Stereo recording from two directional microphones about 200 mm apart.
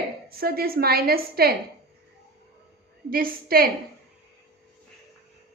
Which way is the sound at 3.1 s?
45° right (ahead or behind).